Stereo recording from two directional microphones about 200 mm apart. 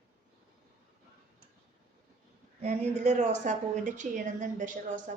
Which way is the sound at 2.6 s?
35° right (ahead or behind).